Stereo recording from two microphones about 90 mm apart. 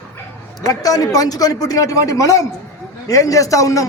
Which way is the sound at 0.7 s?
45° left (ahead or behind).